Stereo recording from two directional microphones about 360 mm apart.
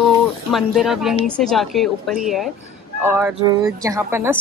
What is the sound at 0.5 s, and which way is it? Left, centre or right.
Speech, centre.